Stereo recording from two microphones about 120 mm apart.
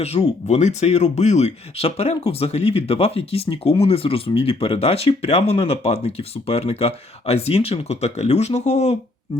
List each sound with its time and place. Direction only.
0.0 s speech: 65° left (ahead or behind)